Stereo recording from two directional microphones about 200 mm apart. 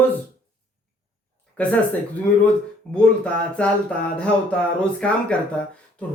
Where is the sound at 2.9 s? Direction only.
5° left (ahead or behind).